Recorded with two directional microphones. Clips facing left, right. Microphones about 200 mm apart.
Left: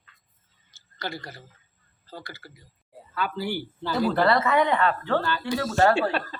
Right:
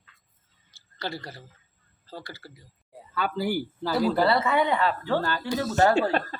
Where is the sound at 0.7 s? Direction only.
30° right (ahead or behind).